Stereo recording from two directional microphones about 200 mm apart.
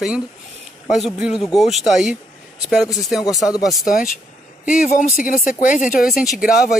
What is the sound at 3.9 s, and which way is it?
Speech, 45° left (ahead or behind).